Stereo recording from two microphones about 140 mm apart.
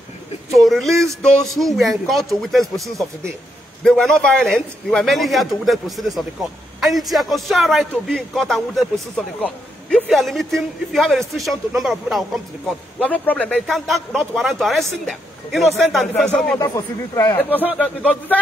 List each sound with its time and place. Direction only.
0.6 s a man's voice: centre (ahead or behind)
13.0 s a man's voice: 10° left (ahead or behind)
16.5 s a man's voice: 25° left (ahead or behind)